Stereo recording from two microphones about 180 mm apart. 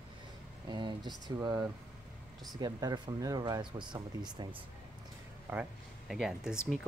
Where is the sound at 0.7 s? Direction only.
25° right (ahead or behind).